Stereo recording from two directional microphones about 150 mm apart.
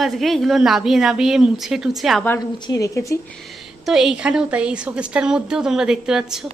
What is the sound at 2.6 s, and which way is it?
Speech, 20° left (ahead or behind).